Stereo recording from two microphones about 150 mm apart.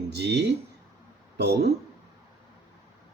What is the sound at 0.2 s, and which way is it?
Speech, 90° right.